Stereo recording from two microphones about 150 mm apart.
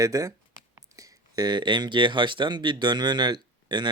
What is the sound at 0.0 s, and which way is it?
Speech, 25° right (ahead or behind).